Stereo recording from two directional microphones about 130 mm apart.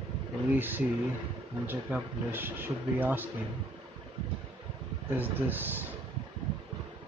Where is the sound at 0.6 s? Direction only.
15° right (ahead or behind).